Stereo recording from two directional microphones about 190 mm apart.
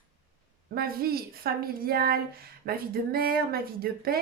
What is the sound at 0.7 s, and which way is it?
Speech, 50° right (ahead or behind).